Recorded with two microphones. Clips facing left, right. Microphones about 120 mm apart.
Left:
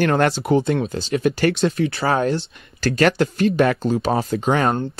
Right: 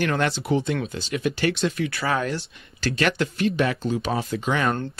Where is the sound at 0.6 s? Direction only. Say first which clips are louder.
Left 6 dB; 35° left (ahead or behind).